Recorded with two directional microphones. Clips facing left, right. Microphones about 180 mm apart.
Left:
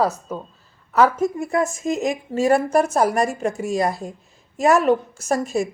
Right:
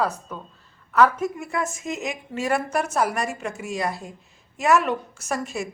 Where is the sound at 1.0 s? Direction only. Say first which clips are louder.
Left 3 dB; 45° left (ahead or behind).